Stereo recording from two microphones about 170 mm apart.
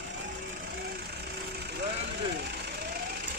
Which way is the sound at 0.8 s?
70° right (ahead or behind).